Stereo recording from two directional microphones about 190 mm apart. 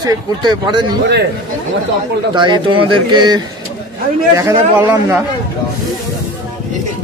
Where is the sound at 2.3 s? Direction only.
25° right (ahead or behind).